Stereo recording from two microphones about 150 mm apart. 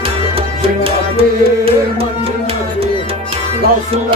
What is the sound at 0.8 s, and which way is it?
Music, 40° right (ahead or behind).